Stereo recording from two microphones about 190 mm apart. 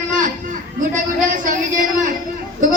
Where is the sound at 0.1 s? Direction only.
45° right (ahead or behind).